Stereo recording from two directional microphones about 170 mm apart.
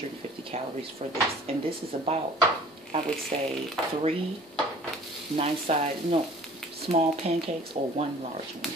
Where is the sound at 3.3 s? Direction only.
35° right (ahead or behind).